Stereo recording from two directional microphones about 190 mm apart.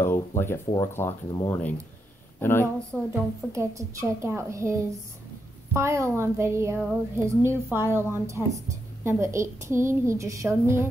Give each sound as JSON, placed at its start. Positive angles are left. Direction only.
{"t": 0.0, "sound": "speech", "side_deg": 10}
{"t": 3.1, "sound": "a woman's voice", "side_deg": -15}